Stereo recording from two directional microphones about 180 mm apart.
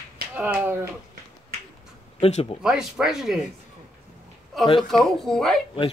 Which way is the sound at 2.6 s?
5° right (ahead or behind).